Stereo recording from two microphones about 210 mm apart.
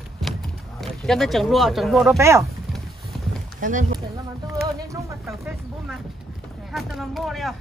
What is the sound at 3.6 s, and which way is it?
Speech, 35° right (ahead or behind).